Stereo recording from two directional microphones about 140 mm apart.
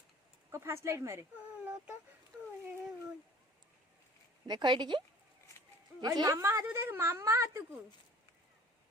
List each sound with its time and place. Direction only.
0.5 s speech: 20° right (ahead or behind)
4.4 s speech: 30° right (ahead or behind)